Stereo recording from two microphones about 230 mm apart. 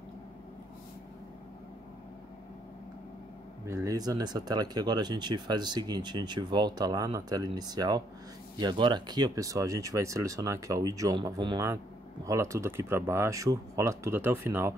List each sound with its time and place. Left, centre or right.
3.6 s speech: centre